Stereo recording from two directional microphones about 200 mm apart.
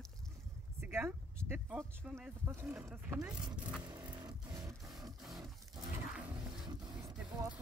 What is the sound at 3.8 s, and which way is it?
Music, 20° right (ahead or behind).